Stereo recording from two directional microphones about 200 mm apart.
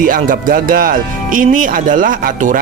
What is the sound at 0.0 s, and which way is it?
Speech, 40° right (ahead or behind).